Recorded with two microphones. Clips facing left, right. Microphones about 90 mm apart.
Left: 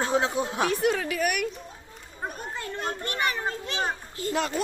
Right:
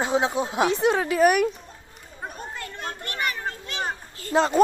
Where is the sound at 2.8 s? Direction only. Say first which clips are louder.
Left 1 dB; 20° left (ahead or behind).